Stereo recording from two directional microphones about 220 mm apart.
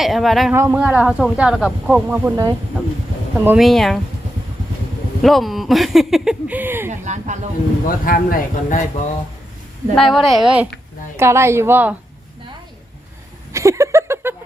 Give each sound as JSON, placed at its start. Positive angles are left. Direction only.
{"t": 0.0, "sound": "speech", "side_deg": 0}
{"t": 3.3, "sound": "speech", "side_deg": -5}
{"t": 5.2, "sound": "speech", "side_deg": 0}
{"t": 7.0, "sound": "speech", "side_deg": -35}
{"t": 7.9, "sound": "speech", "side_deg": 40}
{"t": 9.9, "sound": "speech", "side_deg": 0}
{"t": 13.5, "sound": "a sound", "side_deg": -15}